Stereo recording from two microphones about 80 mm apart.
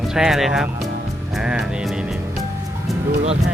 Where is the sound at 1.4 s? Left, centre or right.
Centre.